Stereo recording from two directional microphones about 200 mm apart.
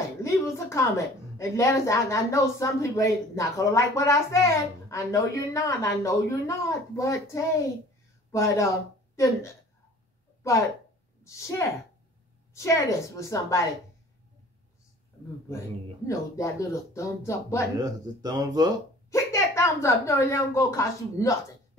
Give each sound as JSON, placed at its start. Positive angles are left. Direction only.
{"t": 0.2, "sound": "a woman's voice", "side_deg": 15}
{"t": 11.2, "sound": "a woman's voice", "side_deg": 15}
{"t": 16.1, "sound": "a woman's voice", "side_deg": 15}
{"t": 17.7, "sound": "speech", "side_deg": -20}
{"t": 19.0, "sound": "a woman's voice", "side_deg": 15}